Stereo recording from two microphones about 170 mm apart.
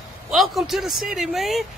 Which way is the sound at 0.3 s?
Centre (ahead or behind).